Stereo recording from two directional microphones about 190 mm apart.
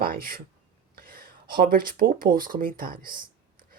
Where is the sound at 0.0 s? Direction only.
50° right (ahead or behind).